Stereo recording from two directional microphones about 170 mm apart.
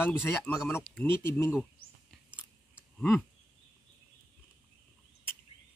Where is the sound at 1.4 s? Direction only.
15° left (ahead or behind).